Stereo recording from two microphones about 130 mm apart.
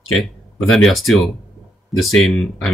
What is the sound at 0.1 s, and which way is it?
Speech, centre (ahead or behind).